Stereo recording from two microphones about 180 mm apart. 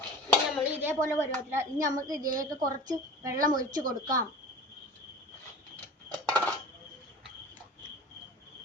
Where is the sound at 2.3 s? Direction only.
45° right (ahead or behind).